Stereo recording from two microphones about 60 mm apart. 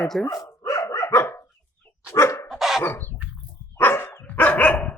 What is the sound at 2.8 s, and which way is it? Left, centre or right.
Dog, left.